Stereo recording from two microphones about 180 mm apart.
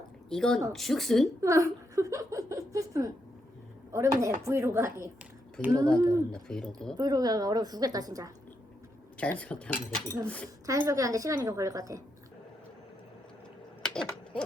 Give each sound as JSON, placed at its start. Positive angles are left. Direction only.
{"t": 0.3, "sound": "speech", "side_deg": 5}
{"t": 1.4, "sound": "a woman's voice", "side_deg": -15}
{"t": 6.3, "sound": "speech", "side_deg": 5}
{"t": 6.9, "sound": "a woman's voice", "side_deg": -20}
{"t": 9.1, "sound": "speech", "side_deg": 5}
{"t": 10.7, "sound": "a woman's voice", "side_deg": -15}
{"t": 13.8, "sound": "owl", "side_deg": 5}